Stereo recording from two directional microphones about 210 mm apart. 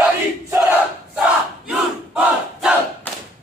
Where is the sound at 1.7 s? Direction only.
5° right (ahead or behind).